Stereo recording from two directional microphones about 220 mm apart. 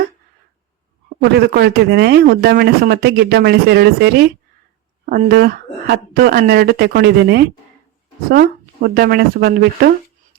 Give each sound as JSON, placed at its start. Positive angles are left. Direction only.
{"t": 1.2, "sound": "speech", "side_deg": -45}